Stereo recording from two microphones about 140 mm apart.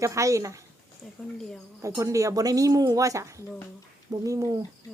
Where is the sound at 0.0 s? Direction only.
20° right (ahead or behind).